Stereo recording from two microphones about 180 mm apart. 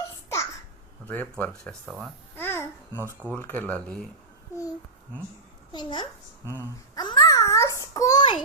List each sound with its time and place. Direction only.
1.0 s speech: 10° left (ahead or behind)
2.3 s babbling: 10° left (ahead or behind)
3.3 s speech: 10° left (ahead or behind)
5.7 s speech: 25° left (ahead or behind)
6.9 s child singing: 25° left (ahead or behind)